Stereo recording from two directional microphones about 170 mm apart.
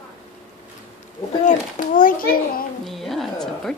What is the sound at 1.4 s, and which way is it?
A child's voice, 50° left (ahead or behind).